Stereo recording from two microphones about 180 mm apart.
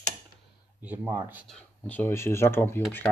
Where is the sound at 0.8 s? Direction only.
10° right (ahead or behind).